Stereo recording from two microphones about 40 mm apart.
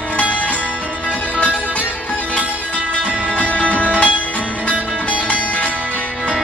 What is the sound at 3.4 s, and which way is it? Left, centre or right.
Music, left.